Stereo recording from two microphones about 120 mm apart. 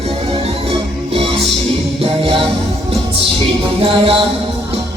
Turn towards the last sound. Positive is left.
turn(degrees=-50)  # may be behind; listen again after turning